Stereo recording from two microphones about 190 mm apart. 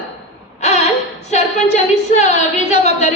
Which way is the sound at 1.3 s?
35° left (ahead or behind).